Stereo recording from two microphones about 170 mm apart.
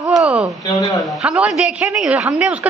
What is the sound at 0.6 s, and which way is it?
Speech, 20° left (ahead or behind).